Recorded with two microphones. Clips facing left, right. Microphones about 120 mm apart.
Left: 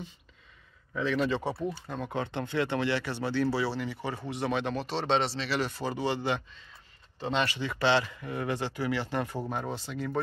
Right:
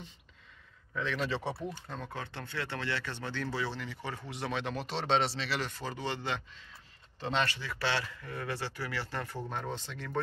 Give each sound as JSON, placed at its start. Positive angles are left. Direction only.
{"t": 0.9, "sound": "speech", "side_deg": 5}
{"t": 1.7, "sound": "speech", "side_deg": 10}